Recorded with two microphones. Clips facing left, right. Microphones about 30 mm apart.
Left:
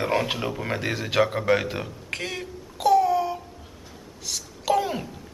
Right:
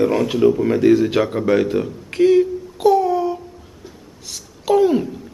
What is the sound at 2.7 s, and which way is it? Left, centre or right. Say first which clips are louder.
Babbling: right 4 dB; centre.